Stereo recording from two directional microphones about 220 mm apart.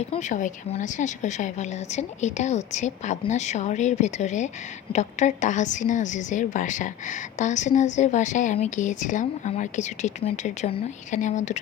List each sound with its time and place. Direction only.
0.1 s a woman's voice: 35° left (ahead or behind)